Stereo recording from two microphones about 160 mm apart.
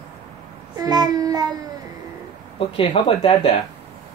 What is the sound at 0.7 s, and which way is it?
Child singing, 25° right (ahead or behind).